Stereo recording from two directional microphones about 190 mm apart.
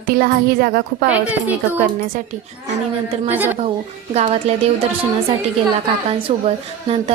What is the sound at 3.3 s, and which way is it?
Speech, 10° right (ahead or behind).